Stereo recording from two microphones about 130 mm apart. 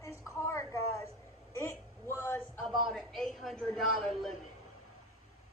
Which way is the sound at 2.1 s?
15° left (ahead or behind).